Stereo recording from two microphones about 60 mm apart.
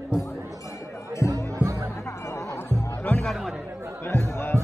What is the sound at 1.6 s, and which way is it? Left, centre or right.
Music, right.